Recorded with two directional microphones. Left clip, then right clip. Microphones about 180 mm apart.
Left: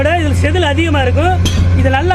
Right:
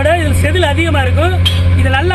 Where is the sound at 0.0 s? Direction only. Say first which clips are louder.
Right 1 dB; 45° left (ahead or behind).